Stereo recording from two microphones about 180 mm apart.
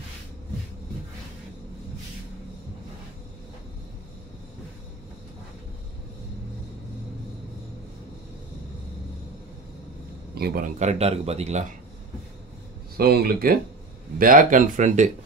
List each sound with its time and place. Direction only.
10.3 s a sound: 60° right (ahead or behind)
10.8 s speech: 35° right (ahead or behind)
12.9 s speech: 60° right (ahead or behind)